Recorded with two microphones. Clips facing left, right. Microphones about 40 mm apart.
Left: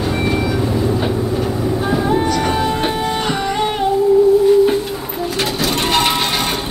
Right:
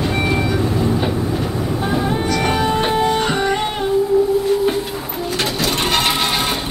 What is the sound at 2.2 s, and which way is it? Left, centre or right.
Music, right.